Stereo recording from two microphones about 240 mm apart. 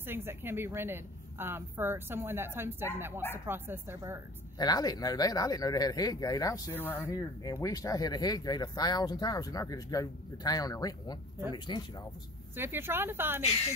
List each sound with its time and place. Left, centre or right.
0.0 s a woman's voice: centre
4.6 s speech: centre
12.5 s a woman's voice: centre